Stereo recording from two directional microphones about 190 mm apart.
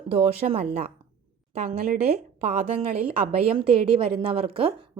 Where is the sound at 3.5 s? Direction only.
25° right (ahead or behind).